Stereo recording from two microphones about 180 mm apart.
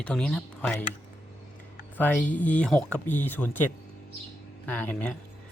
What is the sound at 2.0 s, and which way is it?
A man's voice, 10° left (ahead or behind).